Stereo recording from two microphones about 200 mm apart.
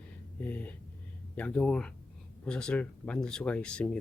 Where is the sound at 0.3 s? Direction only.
10° left (ahead or behind).